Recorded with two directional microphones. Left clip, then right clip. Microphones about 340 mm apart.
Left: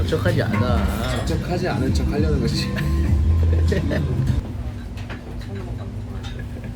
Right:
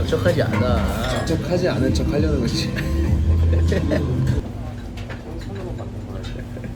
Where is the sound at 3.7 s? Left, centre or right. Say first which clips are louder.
Right 2 dB; centre.